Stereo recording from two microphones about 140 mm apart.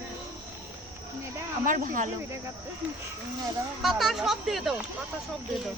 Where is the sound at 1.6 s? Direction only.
75° right (ahead or behind).